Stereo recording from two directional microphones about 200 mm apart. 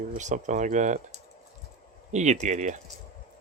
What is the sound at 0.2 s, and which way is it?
Speech, 35° right (ahead or behind).